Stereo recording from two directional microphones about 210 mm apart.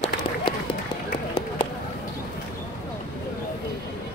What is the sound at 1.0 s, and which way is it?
Run, 30° left (ahead or behind).